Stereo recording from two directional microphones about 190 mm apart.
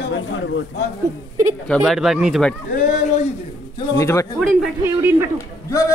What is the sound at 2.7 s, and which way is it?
Speech, 40° left (ahead or behind).